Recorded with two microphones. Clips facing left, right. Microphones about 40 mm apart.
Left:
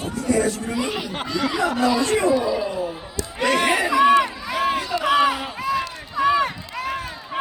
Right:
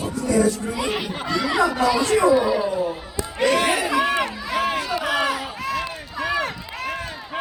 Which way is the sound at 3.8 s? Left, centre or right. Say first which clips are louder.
Left 5 dB; centre.